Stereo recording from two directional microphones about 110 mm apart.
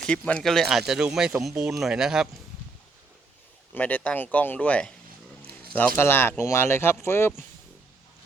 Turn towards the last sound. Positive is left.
turn(degrees=25)  # may be behind; listen again after turning